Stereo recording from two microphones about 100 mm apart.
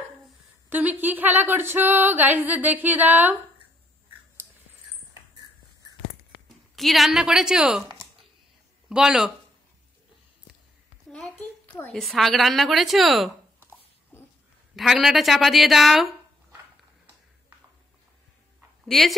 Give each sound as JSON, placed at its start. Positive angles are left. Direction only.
{"t": 0.7, "sound": "a sound", "side_deg": -15}
{"t": 5.3, "sound": "dog", "side_deg": -40}
{"t": 6.7, "sound": "a woman's voice", "side_deg": 0}
{"t": 8.8, "sound": "speech", "side_deg": -5}
{"t": 11.1, "sound": "a sound", "side_deg": 5}
{"t": 11.9, "sound": "a woman's voice", "side_deg": 0}
{"t": 13.6, "sound": "a sound", "side_deg": 25}
{"t": 14.8, "sound": "a woman's voice", "side_deg": -5}
{"t": 18.9, "sound": "a woman's voice", "side_deg": 0}